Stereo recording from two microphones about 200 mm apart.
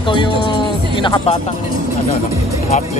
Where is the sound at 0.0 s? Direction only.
25° left (ahead or behind).